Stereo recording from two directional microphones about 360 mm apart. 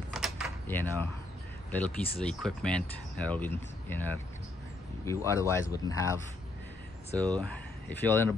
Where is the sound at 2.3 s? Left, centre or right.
Centre.